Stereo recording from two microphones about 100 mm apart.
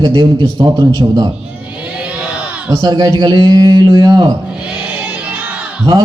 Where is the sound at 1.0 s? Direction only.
40° right (ahead or behind).